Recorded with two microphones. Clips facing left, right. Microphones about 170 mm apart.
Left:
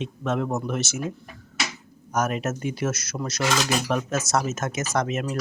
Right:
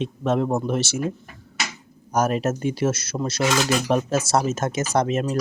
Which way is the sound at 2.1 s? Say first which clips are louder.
Right 4 dB; 30° right (ahead or behind).